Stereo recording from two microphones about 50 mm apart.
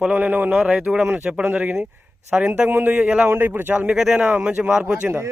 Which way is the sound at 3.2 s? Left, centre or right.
Right.